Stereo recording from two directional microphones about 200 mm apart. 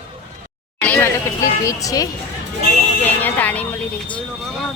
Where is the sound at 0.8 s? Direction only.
10° left (ahead or behind).